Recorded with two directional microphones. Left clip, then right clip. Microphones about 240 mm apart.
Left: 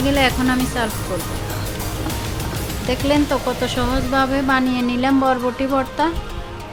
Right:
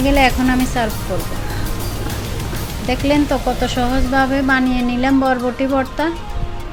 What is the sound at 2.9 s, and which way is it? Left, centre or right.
Speech, centre.